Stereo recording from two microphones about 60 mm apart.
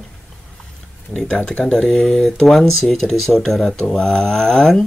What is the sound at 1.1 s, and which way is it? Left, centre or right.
Speech, centre.